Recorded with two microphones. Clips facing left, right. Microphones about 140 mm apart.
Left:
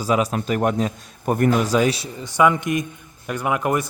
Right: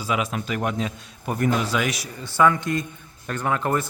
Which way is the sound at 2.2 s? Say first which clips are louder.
Left 2 dB; 15° left (ahead or behind).